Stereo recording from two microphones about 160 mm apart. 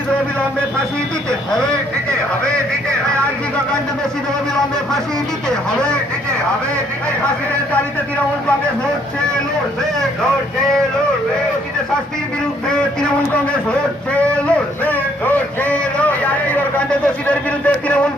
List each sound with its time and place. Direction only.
15.6 s a man's voice: 10° left (ahead or behind)